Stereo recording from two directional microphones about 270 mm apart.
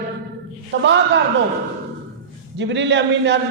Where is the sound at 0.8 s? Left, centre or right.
Right.